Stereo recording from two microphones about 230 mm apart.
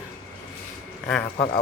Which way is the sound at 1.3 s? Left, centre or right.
Left.